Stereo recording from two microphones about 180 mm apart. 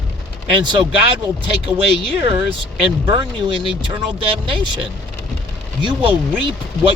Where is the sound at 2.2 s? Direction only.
30° right (ahead or behind).